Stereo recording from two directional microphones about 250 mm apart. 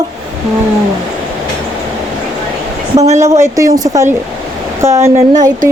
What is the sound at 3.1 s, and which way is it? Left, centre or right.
Speech, centre.